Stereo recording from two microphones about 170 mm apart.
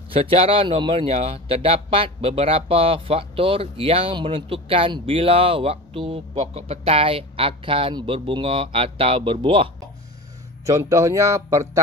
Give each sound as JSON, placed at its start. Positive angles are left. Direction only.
{"t": 0.1, "sound": "speech", "side_deg": -35}
{"t": 10.6, "sound": "speech", "side_deg": -15}